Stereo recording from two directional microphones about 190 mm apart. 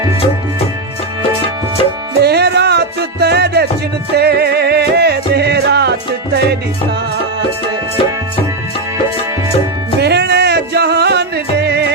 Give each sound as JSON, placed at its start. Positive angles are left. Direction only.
{"t": 2.2, "sound": "music", "side_deg": -60}
{"t": 10.0, "sound": "music", "side_deg": -60}